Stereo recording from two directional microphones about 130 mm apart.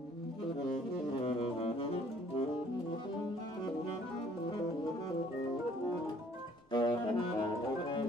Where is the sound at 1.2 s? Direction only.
45° left (ahead or behind).